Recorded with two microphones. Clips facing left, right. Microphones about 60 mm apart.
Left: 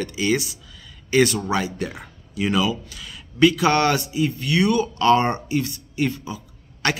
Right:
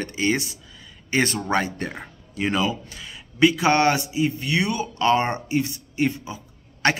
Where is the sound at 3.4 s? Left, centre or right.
Right.